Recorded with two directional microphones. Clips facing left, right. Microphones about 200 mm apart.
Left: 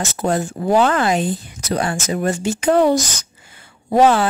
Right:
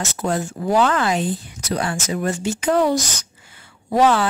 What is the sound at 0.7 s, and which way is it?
Speech, 45° left (ahead or behind).